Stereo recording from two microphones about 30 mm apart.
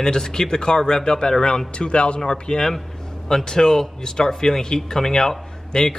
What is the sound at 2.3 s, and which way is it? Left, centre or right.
Speech, left.